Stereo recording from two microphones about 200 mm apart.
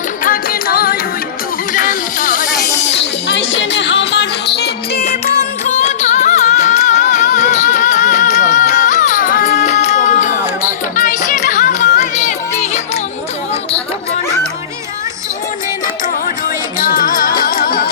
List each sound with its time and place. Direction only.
0.3 s music: 50° left (ahead or behind)
1.7 s a sound: 40° left (ahead or behind)
3.0 s music: 65° left (ahead or behind)
5.2 s music: 35° left (ahead or behind)
16.7 s music: 45° left (ahead or behind)